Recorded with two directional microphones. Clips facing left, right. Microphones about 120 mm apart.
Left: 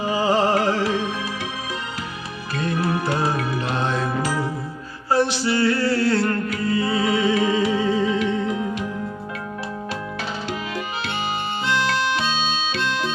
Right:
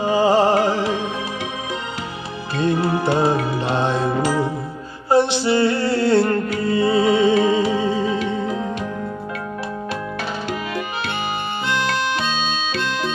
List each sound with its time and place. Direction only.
0.0 s music: 30° right (ahead or behind)
2.5 s music: 25° right (ahead or behind)
11.6 s music: 50° right (ahead or behind)